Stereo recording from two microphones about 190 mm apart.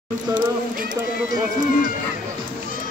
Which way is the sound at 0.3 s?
20° right (ahead or behind).